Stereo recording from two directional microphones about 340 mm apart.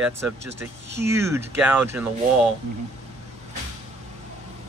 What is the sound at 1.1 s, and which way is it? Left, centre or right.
Speech, centre.